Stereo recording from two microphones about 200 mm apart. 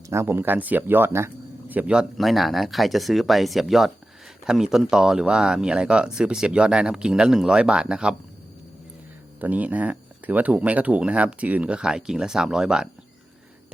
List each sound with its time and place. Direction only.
0.1 s speech: 10° right (ahead or behind)
9.4 s speech: 10° right (ahead or behind)